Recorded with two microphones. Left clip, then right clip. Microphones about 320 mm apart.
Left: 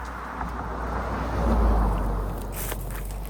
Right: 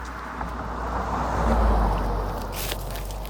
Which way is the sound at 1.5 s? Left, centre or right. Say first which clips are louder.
Right 3 dB; right.